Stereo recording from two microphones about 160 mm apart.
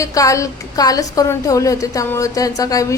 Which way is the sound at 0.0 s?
20° left (ahead or behind).